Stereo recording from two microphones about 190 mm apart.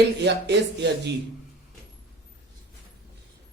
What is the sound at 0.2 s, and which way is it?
Speech, 65° right (ahead or behind).